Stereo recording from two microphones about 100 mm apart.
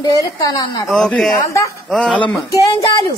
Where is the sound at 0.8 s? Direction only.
5° left (ahead or behind).